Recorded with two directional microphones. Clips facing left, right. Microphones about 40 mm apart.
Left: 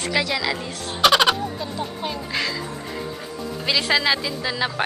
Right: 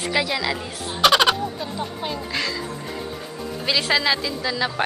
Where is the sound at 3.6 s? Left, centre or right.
Centre.